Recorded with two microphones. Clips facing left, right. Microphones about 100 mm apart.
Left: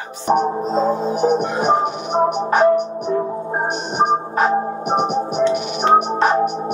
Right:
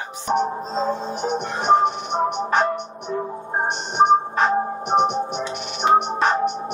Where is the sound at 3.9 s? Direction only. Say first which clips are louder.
Right 2 dB; 5° left (ahead or behind).